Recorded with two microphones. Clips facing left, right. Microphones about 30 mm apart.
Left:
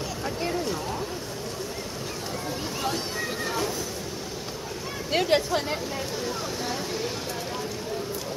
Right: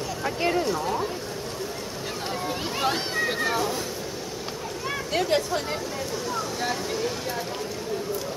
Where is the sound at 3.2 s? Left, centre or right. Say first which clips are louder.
Right 4 dB; right.